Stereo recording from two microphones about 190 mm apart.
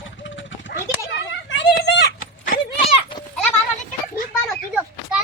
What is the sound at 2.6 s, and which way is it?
Clip-clop, 25° left (ahead or behind).